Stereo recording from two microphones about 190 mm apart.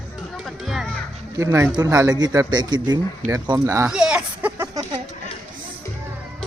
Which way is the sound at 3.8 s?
5° right (ahead or behind).